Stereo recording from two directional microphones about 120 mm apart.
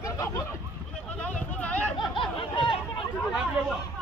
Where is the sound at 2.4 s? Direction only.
45° left (ahead or behind).